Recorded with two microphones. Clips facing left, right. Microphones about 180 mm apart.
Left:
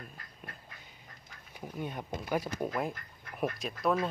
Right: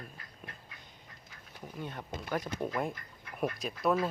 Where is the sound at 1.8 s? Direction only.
15° left (ahead or behind).